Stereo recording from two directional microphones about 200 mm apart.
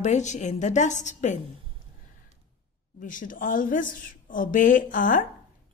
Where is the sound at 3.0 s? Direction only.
40° left (ahead or behind).